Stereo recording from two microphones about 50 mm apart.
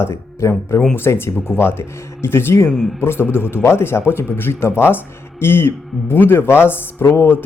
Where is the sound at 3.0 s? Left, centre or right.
Left.